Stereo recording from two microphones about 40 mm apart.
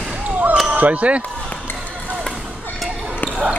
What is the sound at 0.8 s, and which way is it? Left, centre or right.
Speech, right.